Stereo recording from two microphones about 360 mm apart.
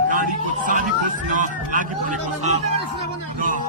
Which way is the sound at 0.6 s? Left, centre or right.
Right.